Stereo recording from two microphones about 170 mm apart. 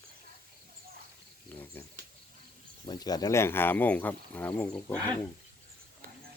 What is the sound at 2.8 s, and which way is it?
Speech, 25° left (ahead or behind).